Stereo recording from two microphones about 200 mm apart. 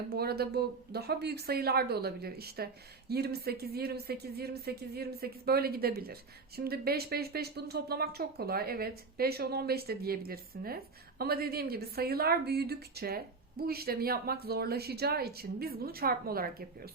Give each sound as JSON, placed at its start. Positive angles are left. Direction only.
{"t": 0.1, "sound": "speech", "side_deg": -50}